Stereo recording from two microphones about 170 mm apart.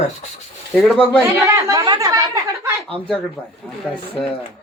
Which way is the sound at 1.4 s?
20° right (ahead or behind).